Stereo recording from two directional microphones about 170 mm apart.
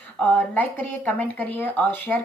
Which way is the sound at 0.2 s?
10° left (ahead or behind).